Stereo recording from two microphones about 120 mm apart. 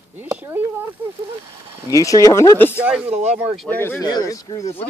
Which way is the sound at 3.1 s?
70° right (ahead or behind).